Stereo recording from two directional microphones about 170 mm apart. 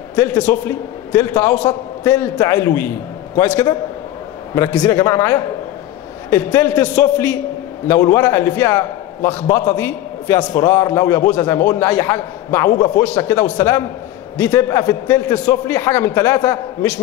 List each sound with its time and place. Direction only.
0.1 s a man's voice: 15° left (ahead or behind)